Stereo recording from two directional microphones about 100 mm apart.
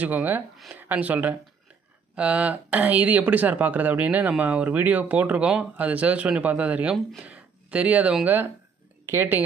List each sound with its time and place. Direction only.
0.0 s speech: 15° right (ahead or behind)
9.0 s speech: 20° right (ahead or behind)